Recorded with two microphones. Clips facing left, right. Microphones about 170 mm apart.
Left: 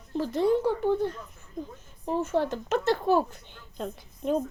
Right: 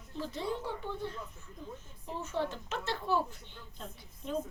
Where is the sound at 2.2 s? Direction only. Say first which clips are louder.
Left 8 dB; 90° left.